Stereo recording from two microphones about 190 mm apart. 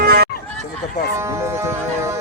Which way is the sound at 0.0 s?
55° right (ahead or behind).